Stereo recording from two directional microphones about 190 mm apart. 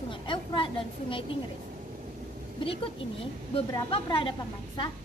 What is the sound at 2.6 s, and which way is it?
A woman's voice, 30° left (ahead or behind).